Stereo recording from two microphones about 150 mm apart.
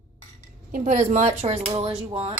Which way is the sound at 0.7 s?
55° right (ahead or behind).